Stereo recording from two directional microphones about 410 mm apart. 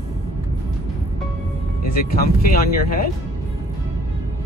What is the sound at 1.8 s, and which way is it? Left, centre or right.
Speech, left.